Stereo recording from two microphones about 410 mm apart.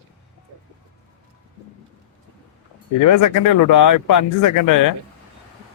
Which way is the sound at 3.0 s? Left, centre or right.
Left.